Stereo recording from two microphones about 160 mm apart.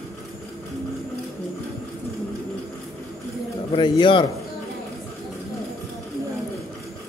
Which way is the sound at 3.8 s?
30° left (ahead or behind).